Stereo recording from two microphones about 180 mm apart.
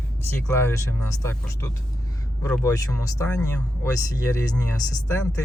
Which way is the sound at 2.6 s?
15° left (ahead or behind).